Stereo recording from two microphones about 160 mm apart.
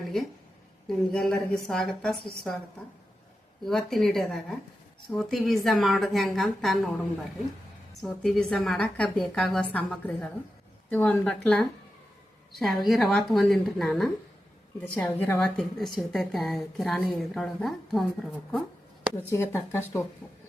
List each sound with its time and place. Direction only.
0.1 s a woman's voice: centre (ahead or behind)
3.6 s a woman's voice: centre (ahead or behind)
8.0 s a woman's voice: 5° left (ahead or behind)
19.3 s speech: 15° left (ahead or behind)